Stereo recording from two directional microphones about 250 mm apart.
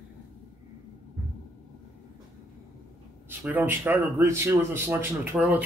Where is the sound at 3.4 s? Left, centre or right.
Centre.